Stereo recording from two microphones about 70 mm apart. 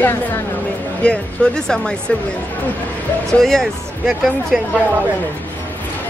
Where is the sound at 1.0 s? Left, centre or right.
Centre.